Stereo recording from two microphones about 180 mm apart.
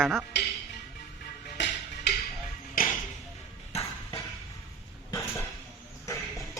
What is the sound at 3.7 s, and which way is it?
Ping, 35° left (ahead or behind).